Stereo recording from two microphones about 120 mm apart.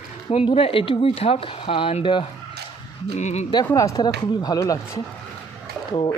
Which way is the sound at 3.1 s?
75° left (ahead or behind).